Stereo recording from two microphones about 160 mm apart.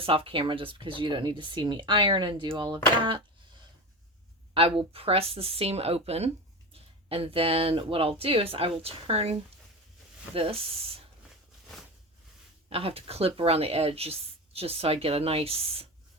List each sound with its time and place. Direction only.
0.0 s speech: 35° right (ahead or behind)
4.5 s speech: 35° right (ahead or behind)
12.7 s speech: 35° right (ahead or behind)